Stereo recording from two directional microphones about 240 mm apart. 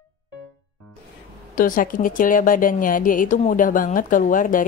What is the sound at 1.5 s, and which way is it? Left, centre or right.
Speech, left.